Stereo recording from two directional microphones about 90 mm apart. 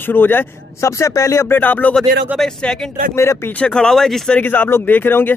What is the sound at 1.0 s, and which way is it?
Speech, 35° left (ahead or behind).